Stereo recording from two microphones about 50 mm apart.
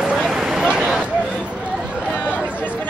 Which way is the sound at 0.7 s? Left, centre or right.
Centre.